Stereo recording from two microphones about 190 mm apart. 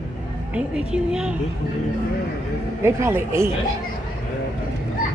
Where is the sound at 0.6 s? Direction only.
5° right (ahead or behind).